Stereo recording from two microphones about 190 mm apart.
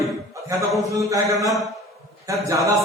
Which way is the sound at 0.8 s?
15° right (ahead or behind).